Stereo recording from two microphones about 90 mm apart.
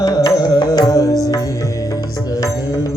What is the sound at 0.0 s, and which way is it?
Music, 50° left (ahead or behind).